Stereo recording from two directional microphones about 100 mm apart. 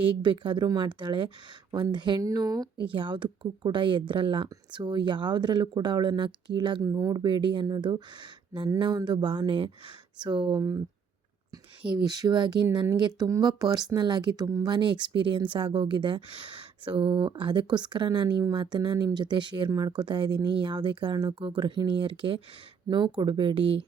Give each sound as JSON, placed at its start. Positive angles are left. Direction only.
{"t": 0.2, "sound": "speech", "side_deg": -55}
{"t": 2.2, "sound": "speech", "side_deg": -35}
{"t": 2.8, "sound": "speech", "side_deg": -55}
{"t": 6.8, "sound": "speech", "side_deg": -40}
{"t": 10.6, "sound": "speech", "side_deg": -35}
{"t": 11.8, "sound": "speech", "side_deg": -45}